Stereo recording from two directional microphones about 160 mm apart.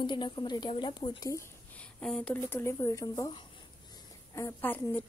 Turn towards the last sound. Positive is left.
turn(degrees=10)  # may be behind; listen again after turning